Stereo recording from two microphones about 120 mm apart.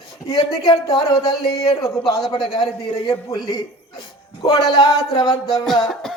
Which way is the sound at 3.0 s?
35° left (ahead or behind).